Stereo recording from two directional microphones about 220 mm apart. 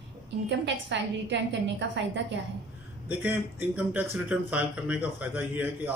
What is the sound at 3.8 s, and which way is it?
A man's voice, 5° right (ahead or behind).